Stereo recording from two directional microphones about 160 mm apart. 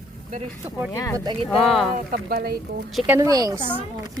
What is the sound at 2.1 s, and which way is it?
Speech, 70° right (ahead or behind).